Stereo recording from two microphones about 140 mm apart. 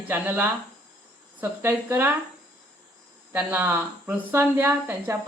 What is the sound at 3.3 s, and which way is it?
Speech, 15° right (ahead or behind).